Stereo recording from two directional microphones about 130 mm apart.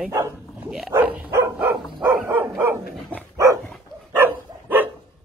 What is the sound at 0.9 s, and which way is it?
Dog, 15° right (ahead or behind).